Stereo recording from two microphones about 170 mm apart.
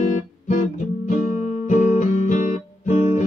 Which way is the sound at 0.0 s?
45° left (ahead or behind).